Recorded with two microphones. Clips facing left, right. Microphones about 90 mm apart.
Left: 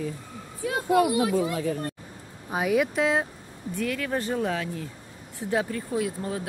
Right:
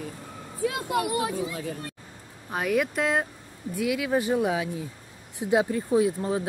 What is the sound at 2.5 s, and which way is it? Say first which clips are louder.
Speech: left 2 dB; 5° left (ahead or behind).